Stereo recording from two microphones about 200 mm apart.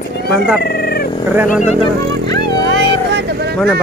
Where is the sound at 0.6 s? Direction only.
50° left (ahead or behind).